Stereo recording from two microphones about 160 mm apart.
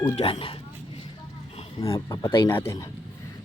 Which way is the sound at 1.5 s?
35° left (ahead or behind).